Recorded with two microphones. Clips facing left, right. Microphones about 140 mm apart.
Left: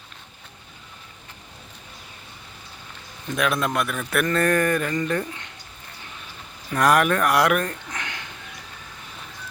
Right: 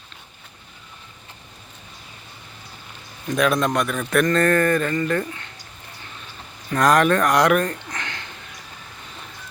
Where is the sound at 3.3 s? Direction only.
5° left (ahead or behind).